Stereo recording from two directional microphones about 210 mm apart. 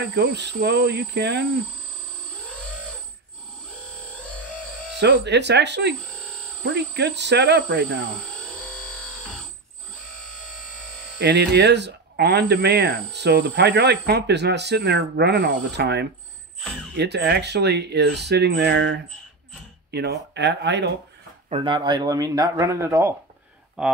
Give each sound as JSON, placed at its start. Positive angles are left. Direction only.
{"t": 0.0, "sound": "speech", "side_deg": -55}
{"t": 4.9, "sound": "speech", "side_deg": -55}
{"t": 11.1, "sound": "speech", "side_deg": -55}
{"t": 21.5, "sound": "speech", "side_deg": -25}